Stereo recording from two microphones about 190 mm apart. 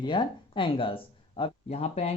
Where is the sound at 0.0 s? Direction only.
25° left (ahead or behind).